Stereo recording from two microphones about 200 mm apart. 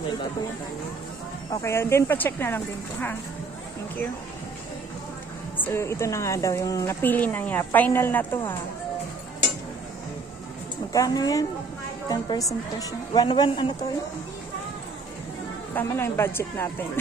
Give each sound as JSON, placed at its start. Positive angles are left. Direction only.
{"t": 1.5, "sound": "a woman's voice", "side_deg": 15}
{"t": 5.6, "sound": "a woman's voice", "side_deg": 15}
{"t": 10.9, "sound": "a woman's voice", "side_deg": 20}
{"t": 15.7, "sound": "a woman's voice", "side_deg": 10}